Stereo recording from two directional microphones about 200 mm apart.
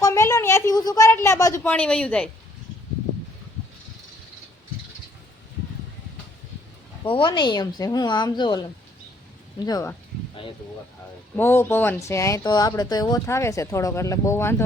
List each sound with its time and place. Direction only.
0.0 s a woman's voice: 15° left (ahead or behind)
7.0 s speech: 25° left (ahead or behind)
11.3 s speech: 10° left (ahead or behind)